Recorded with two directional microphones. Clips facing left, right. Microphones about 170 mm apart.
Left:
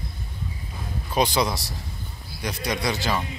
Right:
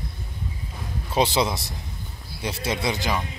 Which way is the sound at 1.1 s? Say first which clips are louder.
Right 1 dB; 25° right (ahead or behind).